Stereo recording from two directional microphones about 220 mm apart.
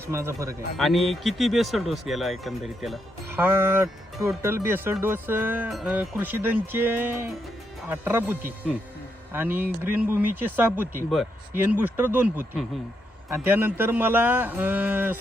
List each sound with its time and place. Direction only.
0.1 s speech: 10° right (ahead or behind)
0.8 s speech: centre (ahead or behind)